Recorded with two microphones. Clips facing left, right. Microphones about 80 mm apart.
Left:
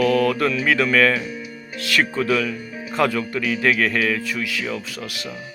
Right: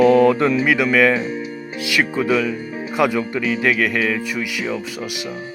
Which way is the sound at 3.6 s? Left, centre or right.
Centre.